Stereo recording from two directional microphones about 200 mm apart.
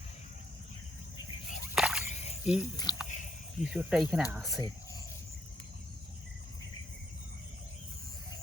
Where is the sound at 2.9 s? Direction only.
20° left (ahead or behind).